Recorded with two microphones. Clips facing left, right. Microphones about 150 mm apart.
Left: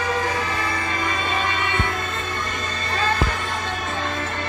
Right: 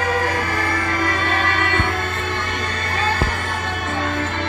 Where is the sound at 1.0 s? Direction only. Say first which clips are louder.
Right 3 dB; 60° right (ahead or behind).